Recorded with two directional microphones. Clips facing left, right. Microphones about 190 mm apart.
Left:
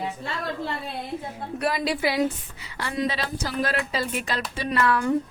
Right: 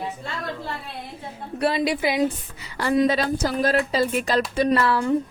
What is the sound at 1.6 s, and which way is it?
Speech, 30° right (ahead or behind).